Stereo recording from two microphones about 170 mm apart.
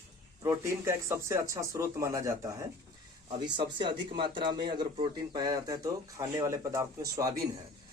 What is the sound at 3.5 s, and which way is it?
Speech, 30° right (ahead or behind).